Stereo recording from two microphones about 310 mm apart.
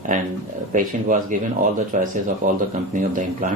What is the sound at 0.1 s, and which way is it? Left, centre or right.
Speech, right.